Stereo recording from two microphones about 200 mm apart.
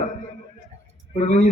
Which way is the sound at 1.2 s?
35° left (ahead or behind).